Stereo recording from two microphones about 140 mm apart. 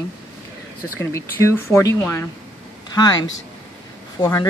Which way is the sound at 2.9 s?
30° left (ahead or behind).